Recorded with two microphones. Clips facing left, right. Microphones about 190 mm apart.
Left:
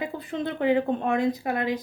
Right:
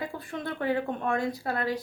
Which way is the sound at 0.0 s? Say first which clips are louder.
Left 5 dB; 20° left (ahead or behind).